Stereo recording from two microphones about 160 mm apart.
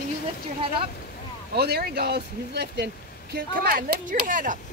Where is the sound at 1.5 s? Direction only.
85° right.